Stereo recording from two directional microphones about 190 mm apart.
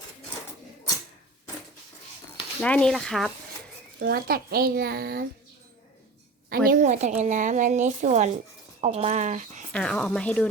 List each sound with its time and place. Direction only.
2.6 s speech: 5° left (ahead or behind)
4.0 s a child's voice: 55° right (ahead or behind)
6.7 s a woman's voice: 40° right (ahead or behind)
9.7 s speech: 5° left (ahead or behind)